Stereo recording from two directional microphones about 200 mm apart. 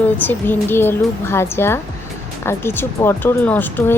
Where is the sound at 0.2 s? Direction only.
10° left (ahead or behind).